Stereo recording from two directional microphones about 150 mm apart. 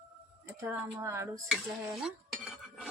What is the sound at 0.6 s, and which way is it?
Speech, 20° right (ahead or behind).